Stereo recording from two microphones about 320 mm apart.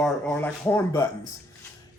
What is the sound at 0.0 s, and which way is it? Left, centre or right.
Speech, centre.